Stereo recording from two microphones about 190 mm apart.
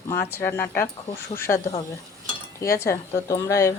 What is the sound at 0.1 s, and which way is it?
Speech, 15° left (ahead or behind).